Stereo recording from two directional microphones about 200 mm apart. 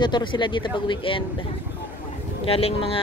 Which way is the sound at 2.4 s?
30° left (ahead or behind).